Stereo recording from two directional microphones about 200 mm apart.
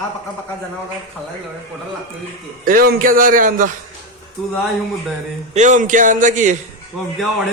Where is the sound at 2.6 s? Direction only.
45° right (ahead or behind).